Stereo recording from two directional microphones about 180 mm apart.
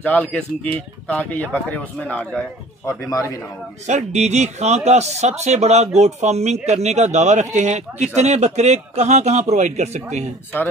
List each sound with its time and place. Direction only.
0.0 s speech: 10° left (ahead or behind)
3.1 s a man's voice: 20° left (ahead or behind)
3.8 s speech: 40° right (ahead or behind)